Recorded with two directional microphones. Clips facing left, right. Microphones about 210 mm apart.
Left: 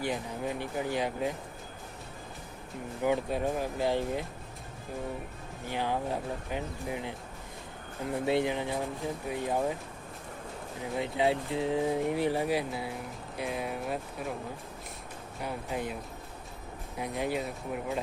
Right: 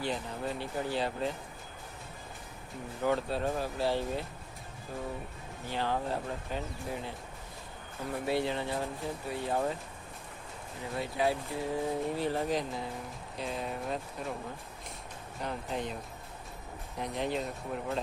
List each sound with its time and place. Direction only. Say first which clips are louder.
0.0 s speech: left 2 dB; 15° left (ahead or behind)
3.0 s speech: left 2 dB; 15° left (ahead or behind)
5.6 s speech: left 1 dB; 15° left (ahead or behind)
8.1 s speech: left 3 dB; 20° left (ahead or behind)
10.9 s speech: left 3 dB; 20° left (ahead or behind); by 14.3 s 5° left (ahead or behind)
15.4 s speech: left 1 dB; 5° left (ahead or behind)
17.0 s speech: left 1 dB; 10° left (ahead or behind)